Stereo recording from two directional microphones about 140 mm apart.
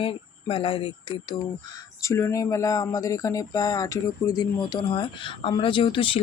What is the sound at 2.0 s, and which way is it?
Speech, 20° left (ahead or behind).